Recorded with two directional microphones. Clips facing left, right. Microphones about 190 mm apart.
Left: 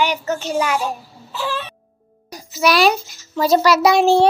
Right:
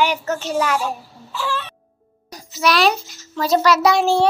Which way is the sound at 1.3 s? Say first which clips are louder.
Left 1 dB; 20° left (ahead or behind).